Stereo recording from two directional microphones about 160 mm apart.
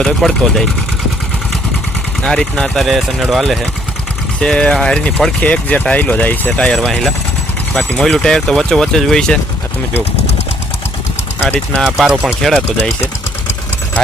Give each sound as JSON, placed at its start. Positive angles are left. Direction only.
{"t": 0.0, "sound": "speech", "side_deg": 0}
{"t": 2.2, "sound": "speech", "side_deg": 5}
{"t": 11.4, "sound": "speech", "side_deg": 5}
{"t": 11.9, "sound": "speech", "side_deg": -5}